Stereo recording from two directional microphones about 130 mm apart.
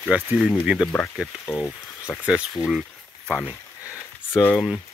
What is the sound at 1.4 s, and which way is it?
Speech, 15° left (ahead or behind).